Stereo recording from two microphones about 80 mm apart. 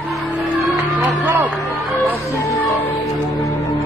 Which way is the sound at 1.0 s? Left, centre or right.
Right.